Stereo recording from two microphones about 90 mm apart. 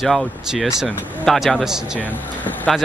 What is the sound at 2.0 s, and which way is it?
Speech, 20° left (ahead or behind).